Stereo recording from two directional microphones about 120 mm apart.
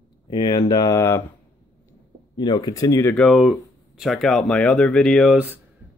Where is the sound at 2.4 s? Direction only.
35° left (ahead or behind).